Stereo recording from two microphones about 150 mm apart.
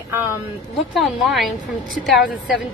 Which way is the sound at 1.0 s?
Centre (ahead or behind).